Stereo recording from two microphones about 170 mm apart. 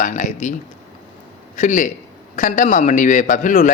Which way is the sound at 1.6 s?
50° left (ahead or behind).